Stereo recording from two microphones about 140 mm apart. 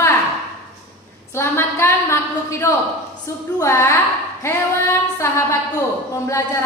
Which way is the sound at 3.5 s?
20° left (ahead or behind).